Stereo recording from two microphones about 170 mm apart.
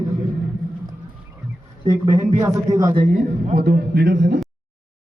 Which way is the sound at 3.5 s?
65° right (ahead or behind).